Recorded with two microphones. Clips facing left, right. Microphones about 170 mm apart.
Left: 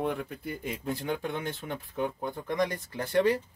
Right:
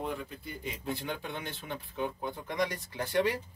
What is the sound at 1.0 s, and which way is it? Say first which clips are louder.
Speech: left 6 dB; 50° left (ahead or behind).